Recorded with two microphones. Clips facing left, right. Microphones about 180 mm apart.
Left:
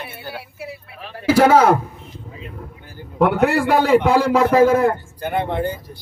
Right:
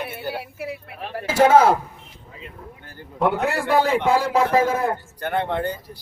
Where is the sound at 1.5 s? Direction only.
75° left (ahead or behind).